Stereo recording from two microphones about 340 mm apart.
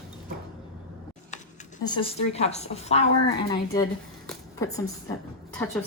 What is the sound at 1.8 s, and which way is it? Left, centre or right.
A woman's voice, centre.